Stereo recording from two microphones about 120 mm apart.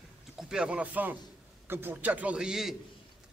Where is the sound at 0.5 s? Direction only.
10° right (ahead or behind).